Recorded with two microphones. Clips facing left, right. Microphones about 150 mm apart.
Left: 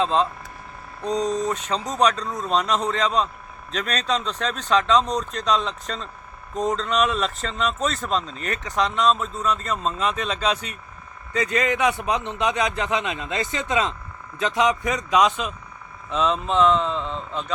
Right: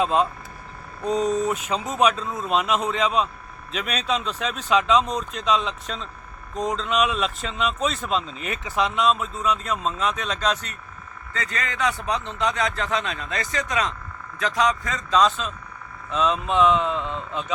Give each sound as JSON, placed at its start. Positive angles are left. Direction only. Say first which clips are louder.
{"t": 0.0, "sound": "speech", "louder": "even", "side_deg": -10}
{"t": 11.3, "sound": "a man's voice", "louder": "left 6 dB", "side_deg": 15}